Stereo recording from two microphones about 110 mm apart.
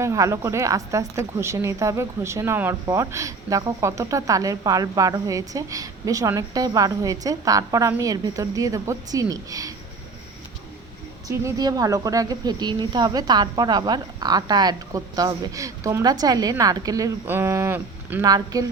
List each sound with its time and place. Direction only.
0.0 s a woman's voice: 30° right (ahead or behind)
11.3 s speech: 30° right (ahead or behind)
17.2 s a woman's voice: 20° right (ahead or behind)
18.2 s speech: 35° right (ahead or behind)